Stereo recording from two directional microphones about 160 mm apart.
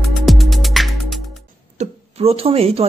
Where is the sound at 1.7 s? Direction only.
40° right (ahead or behind).